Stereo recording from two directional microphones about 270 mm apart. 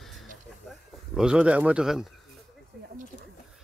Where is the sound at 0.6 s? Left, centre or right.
Centre.